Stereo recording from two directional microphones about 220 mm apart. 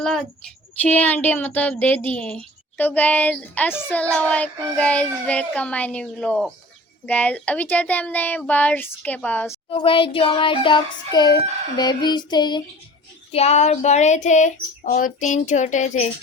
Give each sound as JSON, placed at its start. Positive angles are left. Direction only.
{"t": 0.0, "sound": "speech", "side_deg": 0}
{"t": 9.6, "sound": "child singing", "side_deg": 25}
{"t": 13.3, "sound": "speech", "side_deg": 30}